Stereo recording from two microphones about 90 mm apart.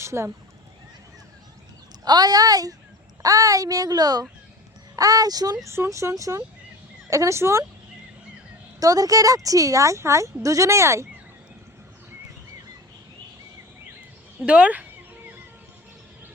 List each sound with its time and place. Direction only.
0.0 s speech: 30° right (ahead or behind)
2.0 s a child's voice: 50° right (ahead or behind)
5.6 s speech: 30° right (ahead or behind)
8.8 s speech: 40° right (ahead or behind)
14.4 s speech: 15° right (ahead or behind)